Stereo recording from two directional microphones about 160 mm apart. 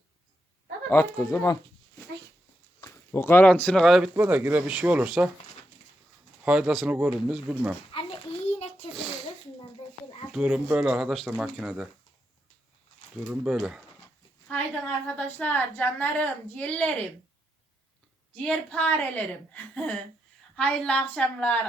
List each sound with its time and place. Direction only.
0.9 s a child's voice: 15° left (ahead or behind)
2.8 s speech: 15° left (ahead or behind); by 4.1 s centre (ahead or behind)
4.1 s speech: 10° right (ahead or behind)
6.4 s speech: 5° right (ahead or behind)
7.9 s a sound: 35° left (ahead or behind)
10.3 s speech: 5° right (ahead or behind)
13.2 s speech: 5° right (ahead or behind)
14.5 s a sound: 10° left (ahead or behind)
15.0 s a child's voice: 10° left (ahead or behind)
18.4 s a child's voice: 10° left (ahead or behind)